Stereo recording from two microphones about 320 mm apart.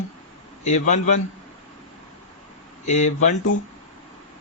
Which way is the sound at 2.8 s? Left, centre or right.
Left.